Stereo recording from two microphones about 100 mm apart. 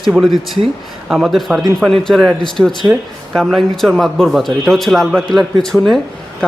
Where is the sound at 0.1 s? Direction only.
5° right (ahead or behind).